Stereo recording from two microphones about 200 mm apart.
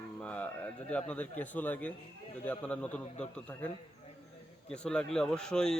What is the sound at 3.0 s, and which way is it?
Speech, 35° left (ahead or behind).